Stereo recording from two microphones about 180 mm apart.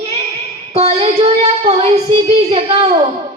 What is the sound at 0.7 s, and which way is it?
A woman's voice, 35° right (ahead or behind).